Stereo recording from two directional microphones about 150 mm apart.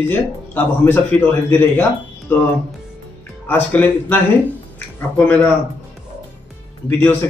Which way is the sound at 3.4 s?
10° left (ahead or behind).